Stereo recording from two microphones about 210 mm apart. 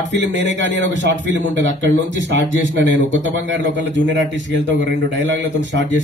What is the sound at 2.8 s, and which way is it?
A man's voice, 65° right (ahead or behind).